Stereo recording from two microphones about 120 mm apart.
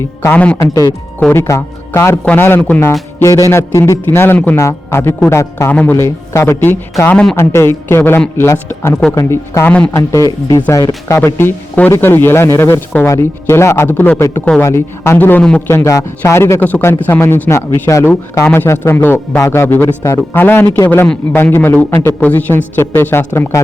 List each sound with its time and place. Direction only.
0.2 s a man's voice: 15° left (ahead or behind)
0.6 s a man's voice: 30° left (ahead or behind); by 2.9 s 15° left (ahead or behind)
3.2 s a man's voice: 25° left (ahead or behind)
9.6 s a man's voice: 10° left (ahead or behind)
9.9 s a man's voice: 25° left (ahead or behind); by 14.6 s 10° left (ahead or behind)
14.6 s a man's voice: 20° left (ahead or behind)
15.7 s a man's voice: 25° left (ahead or behind)